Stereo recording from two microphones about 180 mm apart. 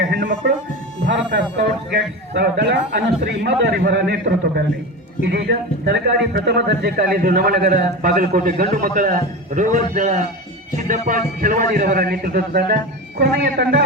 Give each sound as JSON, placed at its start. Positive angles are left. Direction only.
{"t": 0.1, "sound": "speech", "side_deg": -55}
{"t": 1.0, "sound": "a man's voice", "side_deg": -70}